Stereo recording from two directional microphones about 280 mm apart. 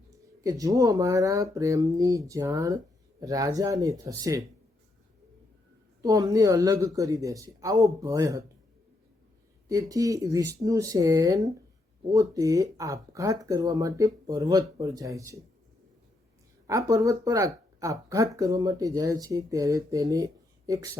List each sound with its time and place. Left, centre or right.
0.4 s speech: centre
6.0 s speech: centre
9.9 s speech: centre
16.6 s speech: centre